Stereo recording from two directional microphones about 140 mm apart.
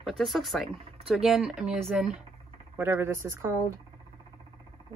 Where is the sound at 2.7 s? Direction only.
15° right (ahead or behind).